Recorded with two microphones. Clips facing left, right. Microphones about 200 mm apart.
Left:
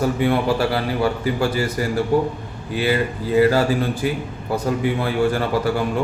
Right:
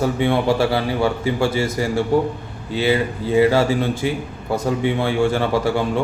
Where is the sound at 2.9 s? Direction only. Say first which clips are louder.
Right 1 dB; 15° right (ahead or behind).